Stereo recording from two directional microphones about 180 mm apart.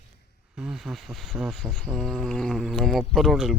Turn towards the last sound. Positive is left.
turn(degrees=0)  # may be behind; listen again after turning